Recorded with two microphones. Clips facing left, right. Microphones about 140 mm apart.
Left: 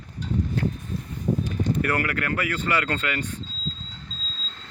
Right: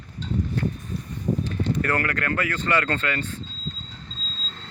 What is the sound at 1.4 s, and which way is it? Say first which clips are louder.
Speech: even; 10° left (ahead or behind).